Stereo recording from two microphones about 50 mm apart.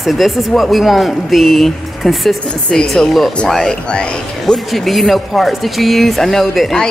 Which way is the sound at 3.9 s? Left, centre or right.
Left.